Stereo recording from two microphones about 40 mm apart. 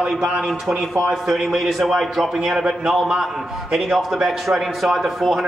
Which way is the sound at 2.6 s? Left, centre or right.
Centre.